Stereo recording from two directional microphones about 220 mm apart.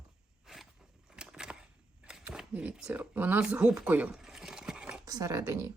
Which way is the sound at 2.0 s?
5° right (ahead or behind).